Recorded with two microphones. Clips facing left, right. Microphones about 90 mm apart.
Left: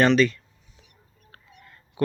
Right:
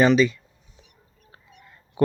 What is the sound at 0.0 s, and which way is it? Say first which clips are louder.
Speech: right 1 dB; 5° right (ahead or behind).